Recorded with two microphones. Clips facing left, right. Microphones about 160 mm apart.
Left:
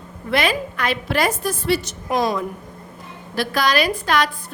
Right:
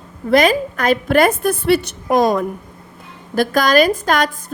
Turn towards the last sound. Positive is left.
turn(degrees=-45)  # may be behind; listen again after turning